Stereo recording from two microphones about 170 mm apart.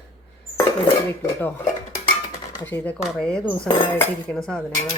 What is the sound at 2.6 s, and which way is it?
Speech, 10° left (ahead or behind).